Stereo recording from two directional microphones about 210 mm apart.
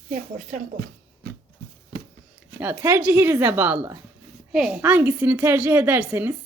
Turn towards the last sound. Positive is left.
turn(degrees=-10)  # may be behind; listen again after turning